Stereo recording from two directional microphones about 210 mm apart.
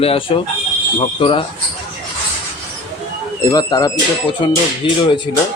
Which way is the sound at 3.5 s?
20° left (ahead or behind).